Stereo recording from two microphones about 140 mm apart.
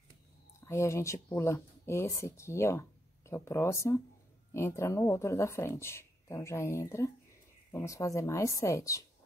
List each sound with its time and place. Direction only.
0.7 s speech: 20° left (ahead or behind)